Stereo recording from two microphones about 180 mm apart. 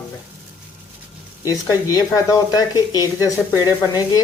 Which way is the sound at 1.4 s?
20° left (ahead or behind).